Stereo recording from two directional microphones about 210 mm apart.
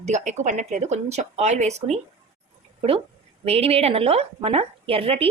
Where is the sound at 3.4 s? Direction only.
30° right (ahead or behind).